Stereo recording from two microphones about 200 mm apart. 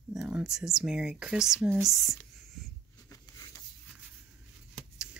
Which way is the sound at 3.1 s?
15° left (ahead or behind).